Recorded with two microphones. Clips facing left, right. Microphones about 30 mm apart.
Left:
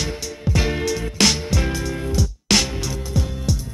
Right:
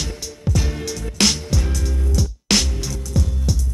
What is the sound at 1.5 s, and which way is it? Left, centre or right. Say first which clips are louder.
Music: left 3 dB; left.